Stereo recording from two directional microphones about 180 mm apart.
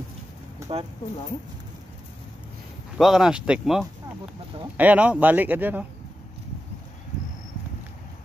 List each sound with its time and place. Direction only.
0.7 s speech: 30° right (ahead or behind)
3.0 s speech: centre (ahead or behind)